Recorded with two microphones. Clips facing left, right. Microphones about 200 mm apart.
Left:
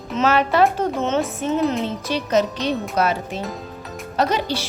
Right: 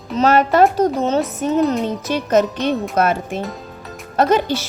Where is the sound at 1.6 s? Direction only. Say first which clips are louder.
Right 3 dB; centre (ahead or behind).